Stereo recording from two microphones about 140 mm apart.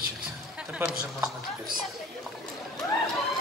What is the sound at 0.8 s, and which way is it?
Speech, 15° right (ahead or behind).